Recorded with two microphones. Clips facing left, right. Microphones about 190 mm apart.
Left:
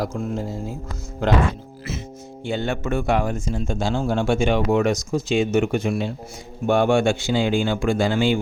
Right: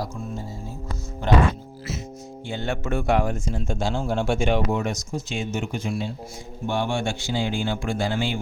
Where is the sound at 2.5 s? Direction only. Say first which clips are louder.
Left 3 dB; 85° left; by 7.0 s 60° left (ahead or behind).